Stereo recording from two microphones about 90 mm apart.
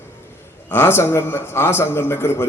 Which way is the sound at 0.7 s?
25° left (ahead or behind).